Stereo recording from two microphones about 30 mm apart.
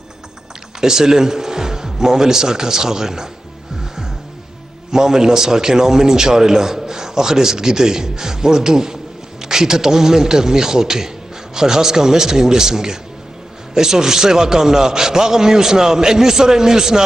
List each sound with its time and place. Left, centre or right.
0.7 s speech: centre
4.9 s a man's voice: right